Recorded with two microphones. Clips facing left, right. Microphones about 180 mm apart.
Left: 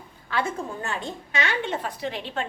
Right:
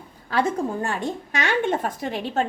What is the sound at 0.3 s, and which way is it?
A woman's voice, 40° right (ahead or behind).